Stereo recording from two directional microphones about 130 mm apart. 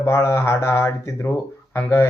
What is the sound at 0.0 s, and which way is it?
A man's voice, 20° left (ahead or behind).